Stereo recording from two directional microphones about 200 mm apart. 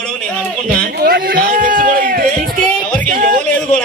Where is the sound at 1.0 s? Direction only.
45° right (ahead or behind).